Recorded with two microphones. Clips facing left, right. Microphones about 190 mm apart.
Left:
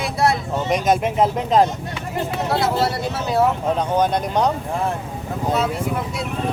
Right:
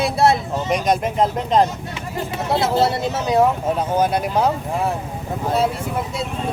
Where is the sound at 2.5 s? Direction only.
25° right (ahead or behind).